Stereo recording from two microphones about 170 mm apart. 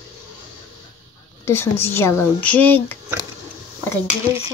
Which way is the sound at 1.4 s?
15° left (ahead or behind).